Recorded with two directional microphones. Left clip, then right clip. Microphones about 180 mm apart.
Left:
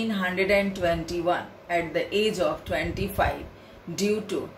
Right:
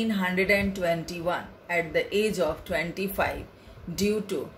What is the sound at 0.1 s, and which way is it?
Speech, 40° right (ahead or behind).